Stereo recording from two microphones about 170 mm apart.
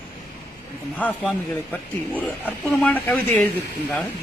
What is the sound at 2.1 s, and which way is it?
A man's voice, 10° left (ahead or behind).